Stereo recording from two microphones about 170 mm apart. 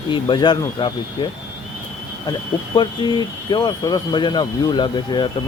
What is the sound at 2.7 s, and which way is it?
Speech, 25° left (ahead or behind).